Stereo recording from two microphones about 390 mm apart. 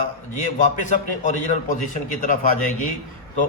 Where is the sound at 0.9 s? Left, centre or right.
Centre.